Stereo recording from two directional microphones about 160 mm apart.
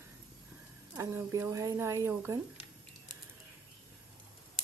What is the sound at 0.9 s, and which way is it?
Speech, 20° right (ahead or behind).